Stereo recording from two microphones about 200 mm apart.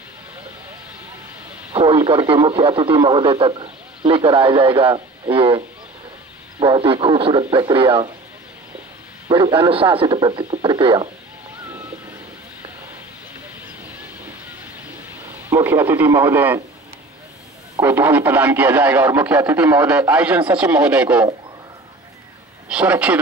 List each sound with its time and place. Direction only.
1.7 s speech: 25° right (ahead or behind)
6.6 s speech: 25° right (ahead or behind)
9.3 s speech: 25° right (ahead or behind)
13.9 s train: 10° right (ahead or behind)
15.5 s speech: 10° right (ahead or behind)
17.7 s speech: 10° right (ahead or behind)
22.7 s speech: 5° right (ahead or behind)